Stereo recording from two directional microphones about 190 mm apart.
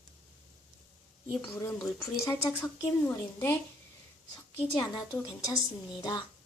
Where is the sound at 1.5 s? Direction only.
15° left (ahead or behind).